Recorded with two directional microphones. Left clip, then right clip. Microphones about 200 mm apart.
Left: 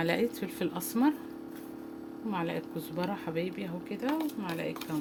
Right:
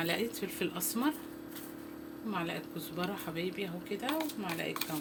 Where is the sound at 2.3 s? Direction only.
55° left (ahead or behind).